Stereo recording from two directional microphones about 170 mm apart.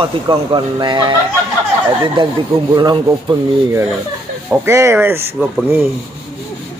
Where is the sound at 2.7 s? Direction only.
25° right (ahead or behind).